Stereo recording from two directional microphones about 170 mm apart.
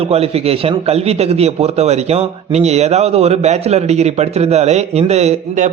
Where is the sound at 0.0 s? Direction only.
35° right (ahead or behind).